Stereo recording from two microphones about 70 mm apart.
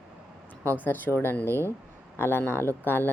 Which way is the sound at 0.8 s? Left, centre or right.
Left.